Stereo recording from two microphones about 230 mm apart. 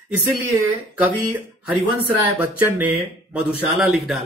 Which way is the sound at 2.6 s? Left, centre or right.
Centre.